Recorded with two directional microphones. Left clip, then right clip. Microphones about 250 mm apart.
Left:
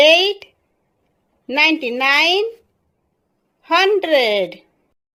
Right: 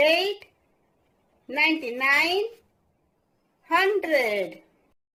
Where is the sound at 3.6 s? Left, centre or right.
Left.